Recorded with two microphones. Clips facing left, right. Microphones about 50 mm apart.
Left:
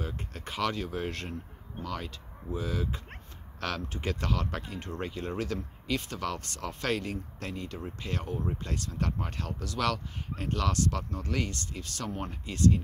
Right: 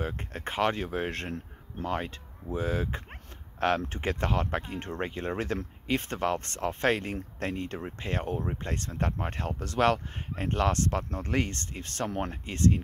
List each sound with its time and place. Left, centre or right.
0.0 s speech: right